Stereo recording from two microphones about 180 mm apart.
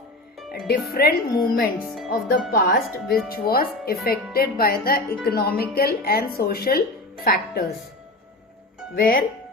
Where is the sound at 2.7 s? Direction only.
55° left (ahead or behind).